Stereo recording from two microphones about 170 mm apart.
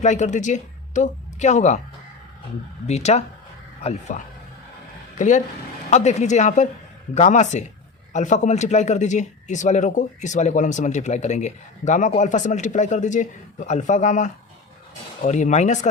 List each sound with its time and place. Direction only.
0.0 s speech: 45° left (ahead or behind)
2.8 s a man's voice: 40° left (ahead or behind)